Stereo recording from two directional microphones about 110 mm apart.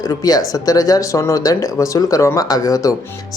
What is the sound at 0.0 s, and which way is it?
Speech, 35° left (ahead or behind).